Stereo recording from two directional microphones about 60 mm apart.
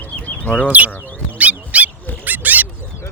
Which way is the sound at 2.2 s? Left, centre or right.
Right.